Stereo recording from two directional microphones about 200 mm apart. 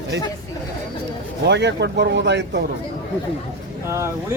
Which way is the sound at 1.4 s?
60° right (ahead or behind).